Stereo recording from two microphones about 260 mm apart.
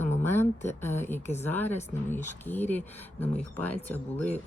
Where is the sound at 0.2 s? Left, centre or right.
Centre.